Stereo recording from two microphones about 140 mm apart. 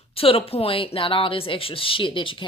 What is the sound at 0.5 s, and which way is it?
A woman's voice, 40° left (ahead or behind).